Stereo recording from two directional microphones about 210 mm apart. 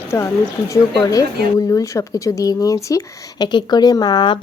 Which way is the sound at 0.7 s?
15° left (ahead or behind).